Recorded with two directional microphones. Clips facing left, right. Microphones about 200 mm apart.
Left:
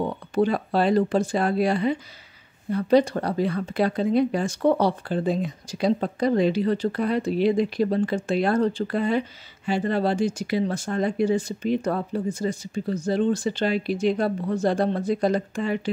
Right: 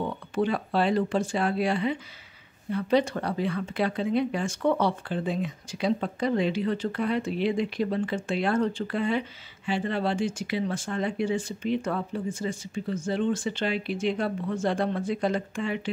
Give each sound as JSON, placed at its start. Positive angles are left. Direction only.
{"t": 0.0, "sound": "speech", "side_deg": 40}